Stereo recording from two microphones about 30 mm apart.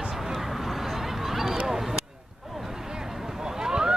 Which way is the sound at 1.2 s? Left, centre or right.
Centre.